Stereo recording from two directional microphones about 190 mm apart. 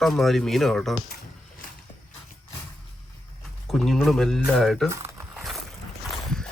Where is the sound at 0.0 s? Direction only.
Centre (ahead or behind).